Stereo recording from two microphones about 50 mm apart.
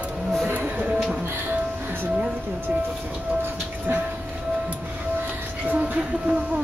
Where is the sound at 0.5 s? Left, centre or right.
Right.